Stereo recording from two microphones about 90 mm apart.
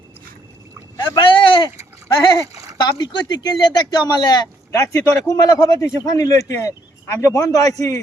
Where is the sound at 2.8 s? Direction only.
55° left (ahead or behind).